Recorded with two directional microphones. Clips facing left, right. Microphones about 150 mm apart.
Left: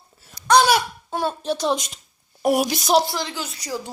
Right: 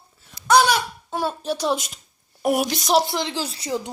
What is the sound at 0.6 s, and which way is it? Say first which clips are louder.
A woman's voice: left 2 dB; 5° left (ahead or behind).